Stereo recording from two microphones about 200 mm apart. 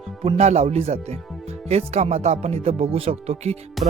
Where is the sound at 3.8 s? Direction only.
40° right (ahead or behind).